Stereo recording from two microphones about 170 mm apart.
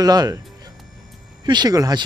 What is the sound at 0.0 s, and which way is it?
Speech, 25° right (ahead or behind).